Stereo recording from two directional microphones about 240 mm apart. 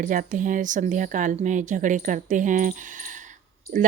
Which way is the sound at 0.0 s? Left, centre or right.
Right.